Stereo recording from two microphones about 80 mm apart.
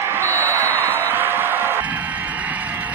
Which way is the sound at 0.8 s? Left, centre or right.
Right.